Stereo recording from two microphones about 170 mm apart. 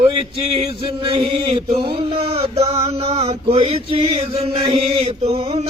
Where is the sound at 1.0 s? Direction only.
35° right (ahead or behind).